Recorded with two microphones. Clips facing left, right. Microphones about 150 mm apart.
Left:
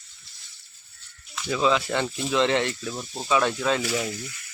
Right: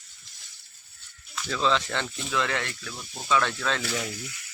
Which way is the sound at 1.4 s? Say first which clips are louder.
Left 3 dB; 10° left (ahead or behind).